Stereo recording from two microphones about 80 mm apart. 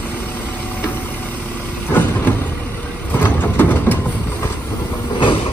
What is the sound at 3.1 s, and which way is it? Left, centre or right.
Train, left.